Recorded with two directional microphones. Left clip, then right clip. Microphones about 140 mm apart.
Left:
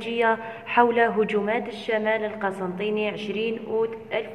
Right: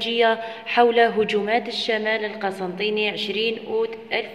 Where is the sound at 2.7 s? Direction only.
30° right (ahead or behind).